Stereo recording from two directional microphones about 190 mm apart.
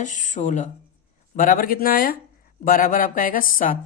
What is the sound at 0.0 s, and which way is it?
Speech, 40° left (ahead or behind).